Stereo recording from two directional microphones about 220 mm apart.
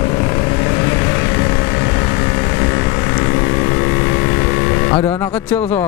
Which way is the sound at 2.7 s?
15° left (ahead or behind).